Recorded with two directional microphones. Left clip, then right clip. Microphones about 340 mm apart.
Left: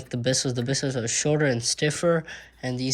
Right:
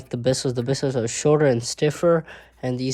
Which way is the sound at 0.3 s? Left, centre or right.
Centre.